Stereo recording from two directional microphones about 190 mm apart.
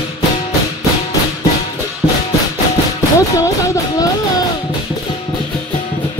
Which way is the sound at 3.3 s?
15° left (ahead or behind).